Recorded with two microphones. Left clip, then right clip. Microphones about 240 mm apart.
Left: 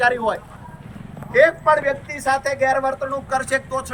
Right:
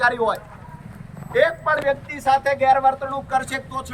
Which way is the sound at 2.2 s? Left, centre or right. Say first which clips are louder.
Right 2 dB; centre.